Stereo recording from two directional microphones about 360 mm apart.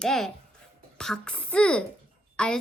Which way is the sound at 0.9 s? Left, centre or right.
Centre.